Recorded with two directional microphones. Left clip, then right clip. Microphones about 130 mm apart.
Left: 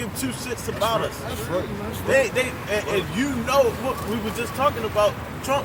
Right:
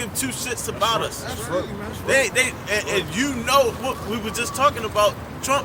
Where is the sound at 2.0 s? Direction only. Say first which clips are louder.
Right 1 dB; 30° right (ahead or behind).